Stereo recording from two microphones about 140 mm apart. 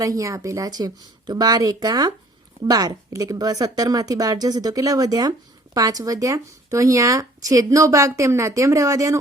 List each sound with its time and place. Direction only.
0.0 s speech: 25° right (ahead or behind)